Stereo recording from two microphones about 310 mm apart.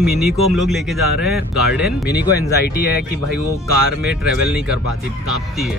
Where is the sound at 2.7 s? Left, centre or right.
Left.